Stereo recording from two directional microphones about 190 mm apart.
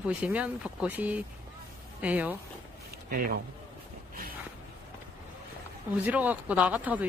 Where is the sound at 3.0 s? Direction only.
50° right (ahead or behind).